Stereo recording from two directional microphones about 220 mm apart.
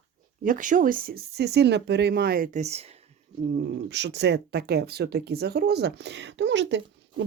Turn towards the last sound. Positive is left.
turn(degrees=-55)  # may be behind; listen again after turning